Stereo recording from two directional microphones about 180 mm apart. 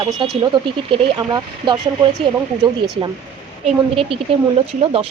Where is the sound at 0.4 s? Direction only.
25° right (ahead or behind).